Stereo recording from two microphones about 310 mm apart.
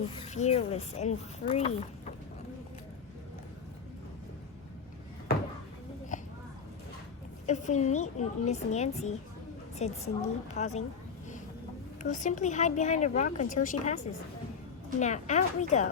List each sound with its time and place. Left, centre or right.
0.1 s speech: centre
6.1 s a sound: left
7.4 s speech: left
12.0 s speech: left